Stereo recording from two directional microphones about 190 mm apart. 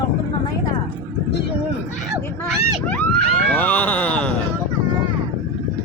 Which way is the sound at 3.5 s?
10° left (ahead or behind).